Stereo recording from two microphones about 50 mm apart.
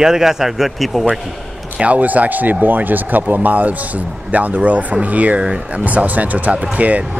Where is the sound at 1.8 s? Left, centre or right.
Right.